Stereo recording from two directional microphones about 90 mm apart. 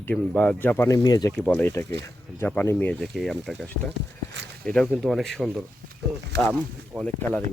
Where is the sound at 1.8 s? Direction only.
25° left (ahead or behind).